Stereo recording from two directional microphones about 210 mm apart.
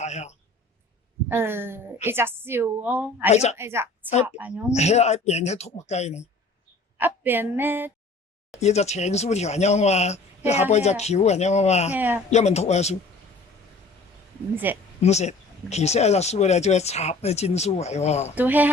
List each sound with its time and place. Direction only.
0.0 s a man's voice: 30° left (ahead or behind)
1.3 s a woman's voice: 10° right (ahead or behind)
3.3 s speech: 30° left (ahead or behind)
3.6 s a woman's voice: 10° right (ahead or behind)
4.7 s speech: 30° left (ahead or behind)
7.0 s a woman's voice: 10° right (ahead or behind)
8.6 s speech: 30° left (ahead or behind)
11.9 s a woman's voice: 10° right (ahead or behind)
12.3 s speech: 30° left (ahead or behind)
14.5 s a woman's voice: 10° right (ahead or behind)
15.0 s speech: 30° left (ahead or behind)
18.3 s a woman's voice: 10° right (ahead or behind)